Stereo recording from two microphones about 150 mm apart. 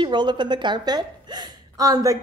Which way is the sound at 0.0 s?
30° right (ahead or behind).